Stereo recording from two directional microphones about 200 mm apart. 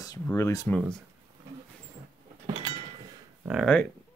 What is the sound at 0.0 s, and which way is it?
Speech, 15° left (ahead or behind).